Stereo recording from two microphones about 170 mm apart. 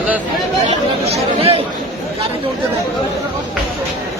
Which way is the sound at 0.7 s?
35° right (ahead or behind).